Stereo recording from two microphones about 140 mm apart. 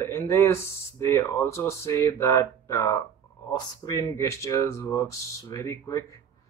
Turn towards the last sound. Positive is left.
turn(degrees=20)  # may be behind; listen again after turning